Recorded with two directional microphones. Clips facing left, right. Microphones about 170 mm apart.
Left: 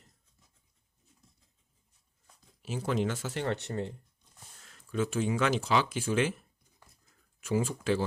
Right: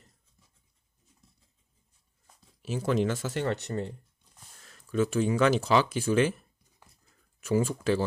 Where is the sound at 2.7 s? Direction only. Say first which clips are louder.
Right 4 dB; 40° right (ahead or behind).